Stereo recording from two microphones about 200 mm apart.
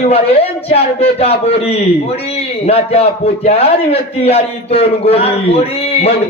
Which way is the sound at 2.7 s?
30° left (ahead or behind).